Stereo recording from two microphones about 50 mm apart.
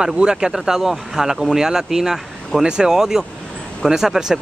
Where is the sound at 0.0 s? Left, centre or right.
Centre.